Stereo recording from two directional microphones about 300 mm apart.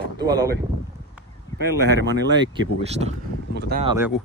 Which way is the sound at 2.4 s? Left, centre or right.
Centre.